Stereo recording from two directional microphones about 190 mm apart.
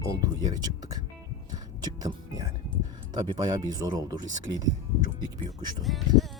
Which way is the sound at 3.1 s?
20° right (ahead or behind).